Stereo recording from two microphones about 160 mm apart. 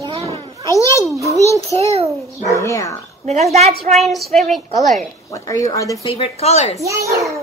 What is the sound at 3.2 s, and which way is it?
Speech, 45° right (ahead or behind).